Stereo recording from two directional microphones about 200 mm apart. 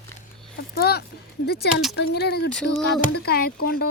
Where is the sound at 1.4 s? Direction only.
55° left (ahead or behind).